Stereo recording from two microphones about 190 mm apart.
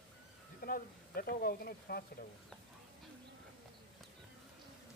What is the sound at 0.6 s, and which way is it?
Speech, 50° left (ahead or behind).